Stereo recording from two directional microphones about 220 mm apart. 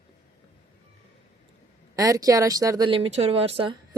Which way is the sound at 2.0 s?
15° right (ahead or behind).